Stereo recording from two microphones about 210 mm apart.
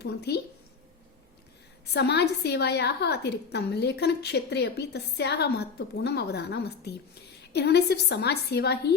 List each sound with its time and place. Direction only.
0.0 s a woman's voice: 50° left (ahead or behind)
1.9 s a woman's voice: 50° left (ahead or behind)